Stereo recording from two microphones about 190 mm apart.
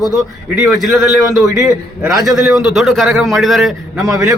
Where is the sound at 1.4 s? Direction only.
15° right (ahead or behind).